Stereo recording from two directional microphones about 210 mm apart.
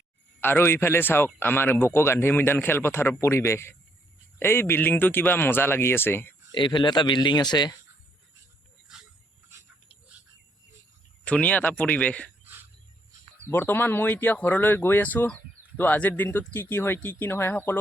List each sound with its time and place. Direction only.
0.3 s a man's voice: 10° left (ahead or behind)
6.5 s speech: 20° left (ahead or behind)
11.3 s a man's voice: 5° left (ahead or behind)
13.5 s a man's voice: 10° left (ahead or behind)